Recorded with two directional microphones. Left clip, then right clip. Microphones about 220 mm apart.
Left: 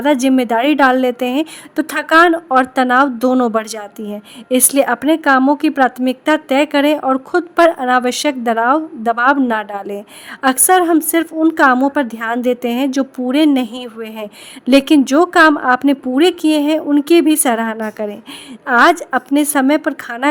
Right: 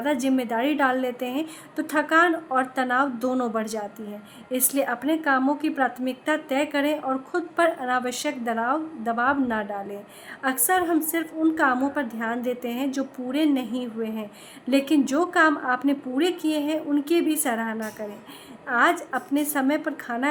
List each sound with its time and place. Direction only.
0.0 s a woman's voice: 45° left (ahead or behind)